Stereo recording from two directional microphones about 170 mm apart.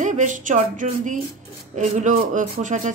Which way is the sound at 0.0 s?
45° right (ahead or behind).